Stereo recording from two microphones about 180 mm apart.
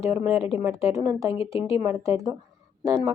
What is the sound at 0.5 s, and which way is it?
Speech, 15° right (ahead or behind).